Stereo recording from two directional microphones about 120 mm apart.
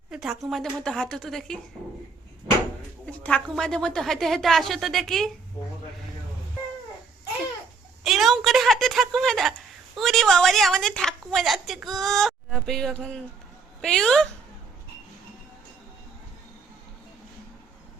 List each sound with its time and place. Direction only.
0.1 s a woman's voice: 5° right (ahead or behind)
3.1 s a sound: 10° left (ahead or behind)
3.5 s a woman's voice: 5° left (ahead or behind)
8.0 s a woman's voice: centre (ahead or behind)